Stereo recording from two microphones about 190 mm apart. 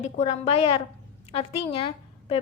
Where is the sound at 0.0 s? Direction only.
35° left (ahead or behind).